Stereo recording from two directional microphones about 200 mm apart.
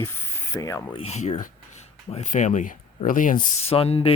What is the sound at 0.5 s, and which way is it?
Speech, 15° left (ahead or behind).